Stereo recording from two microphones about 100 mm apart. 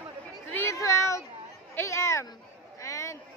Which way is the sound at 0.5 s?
30° left (ahead or behind).